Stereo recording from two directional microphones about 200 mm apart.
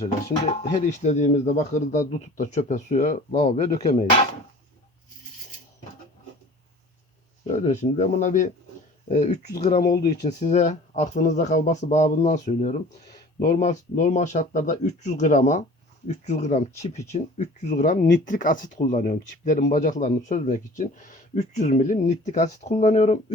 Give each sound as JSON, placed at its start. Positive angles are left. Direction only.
{"t": 0.7, "sound": "speech", "side_deg": 35}
{"t": 7.4, "sound": "speech", "side_deg": 35}
{"t": 10.2, "sound": "speech", "side_deg": 35}